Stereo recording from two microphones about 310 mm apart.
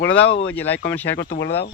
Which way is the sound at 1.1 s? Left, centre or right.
Left.